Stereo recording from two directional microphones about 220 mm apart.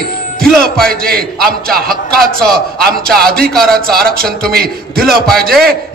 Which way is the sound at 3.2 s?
45° right (ahead or behind).